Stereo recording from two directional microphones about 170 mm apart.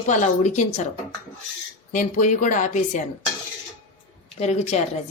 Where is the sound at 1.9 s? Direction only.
50° left (ahead or behind).